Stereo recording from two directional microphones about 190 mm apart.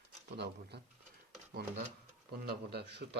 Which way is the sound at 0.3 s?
60° right (ahead or behind).